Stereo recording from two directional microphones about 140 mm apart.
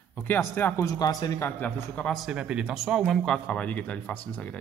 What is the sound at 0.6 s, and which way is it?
Speech, 15° left (ahead or behind).